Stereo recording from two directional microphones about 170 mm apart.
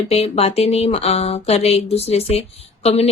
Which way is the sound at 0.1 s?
35° left (ahead or behind).